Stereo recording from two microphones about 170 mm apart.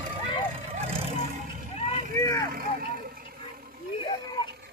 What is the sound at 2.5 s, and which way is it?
Vehicle, 60° right (ahead or behind).